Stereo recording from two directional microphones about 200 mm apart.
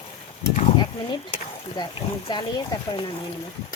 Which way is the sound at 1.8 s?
20° left (ahead or behind).